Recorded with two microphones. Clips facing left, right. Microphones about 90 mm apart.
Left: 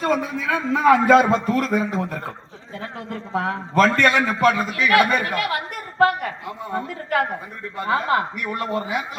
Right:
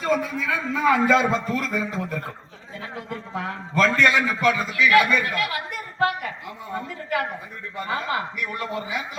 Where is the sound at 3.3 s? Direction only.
50° left (ahead or behind).